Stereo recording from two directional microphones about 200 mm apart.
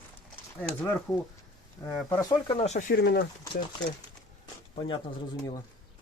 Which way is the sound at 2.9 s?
50° left (ahead or behind).